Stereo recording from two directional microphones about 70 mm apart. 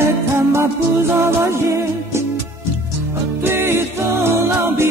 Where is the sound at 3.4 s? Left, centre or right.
Right.